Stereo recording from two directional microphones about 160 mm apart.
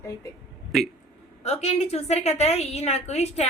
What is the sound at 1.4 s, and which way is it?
A woman's voice, 40° left (ahead or behind).